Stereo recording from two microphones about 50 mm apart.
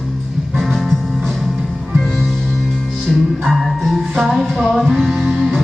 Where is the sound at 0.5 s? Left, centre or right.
Centre.